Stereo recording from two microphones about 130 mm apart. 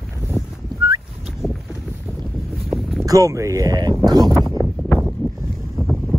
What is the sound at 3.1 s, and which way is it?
Speech, 25° right (ahead or behind).